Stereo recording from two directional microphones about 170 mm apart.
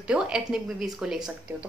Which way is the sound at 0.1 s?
5° right (ahead or behind).